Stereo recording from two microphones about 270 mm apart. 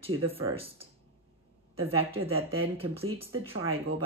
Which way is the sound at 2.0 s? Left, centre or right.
Right.